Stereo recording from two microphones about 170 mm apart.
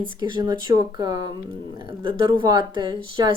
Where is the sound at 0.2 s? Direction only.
25° right (ahead or behind).